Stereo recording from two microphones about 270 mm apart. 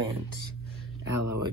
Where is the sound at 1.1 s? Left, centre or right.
Right.